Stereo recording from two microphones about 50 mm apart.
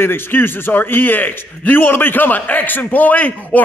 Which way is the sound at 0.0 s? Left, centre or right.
Left.